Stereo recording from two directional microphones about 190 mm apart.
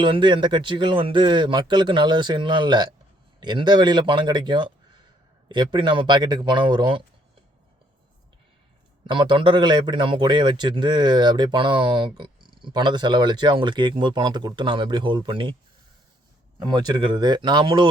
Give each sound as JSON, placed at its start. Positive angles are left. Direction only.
{"t": 0.0, "sound": "a man's voice", "side_deg": -25}
{"t": 9.0, "sound": "a man's voice", "side_deg": -25}
{"t": 16.6, "sound": "a man's voice", "side_deg": -20}